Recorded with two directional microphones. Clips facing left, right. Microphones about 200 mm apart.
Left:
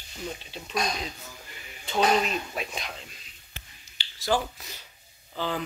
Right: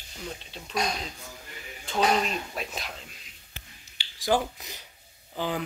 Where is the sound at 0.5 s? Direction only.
Centre (ahead or behind).